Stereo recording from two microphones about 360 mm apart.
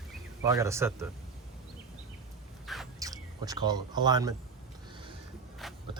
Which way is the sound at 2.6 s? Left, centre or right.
Centre.